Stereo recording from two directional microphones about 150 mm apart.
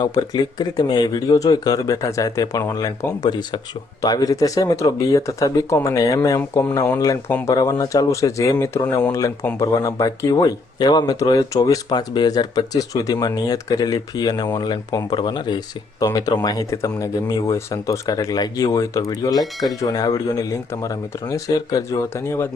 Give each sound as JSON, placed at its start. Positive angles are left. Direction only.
{"t": 0.0, "sound": "speech", "side_deg": 25}